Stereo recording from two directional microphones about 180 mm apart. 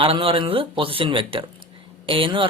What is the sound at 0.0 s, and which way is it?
Speech, 30° right (ahead or behind).